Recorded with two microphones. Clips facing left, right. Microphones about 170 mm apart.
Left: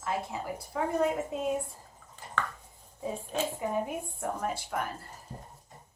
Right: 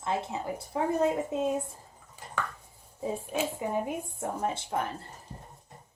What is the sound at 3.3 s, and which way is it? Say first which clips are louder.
A child's voice: even; 20° right (ahead or behind).